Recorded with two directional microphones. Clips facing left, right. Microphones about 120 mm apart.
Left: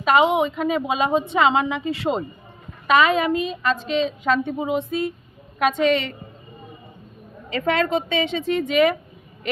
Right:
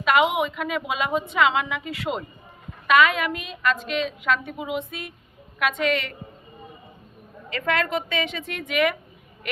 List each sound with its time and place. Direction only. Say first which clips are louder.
0.0 s a woman's voice: left 3 dB; 30° left (ahead or behind)
7.5 s a woman's voice: left 4 dB; 30° left (ahead or behind)